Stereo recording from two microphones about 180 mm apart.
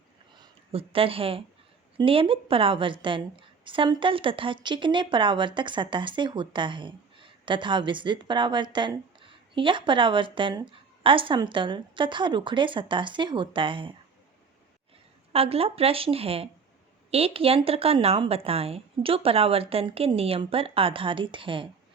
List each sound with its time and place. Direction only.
0.3 s a woman's voice: 30° right (ahead or behind)
15.3 s a woman's voice: 35° right (ahead or behind)